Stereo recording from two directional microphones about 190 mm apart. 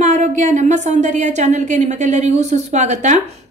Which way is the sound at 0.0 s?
40° right (ahead or behind).